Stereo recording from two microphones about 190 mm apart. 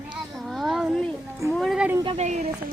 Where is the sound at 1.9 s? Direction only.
30° right (ahead or behind).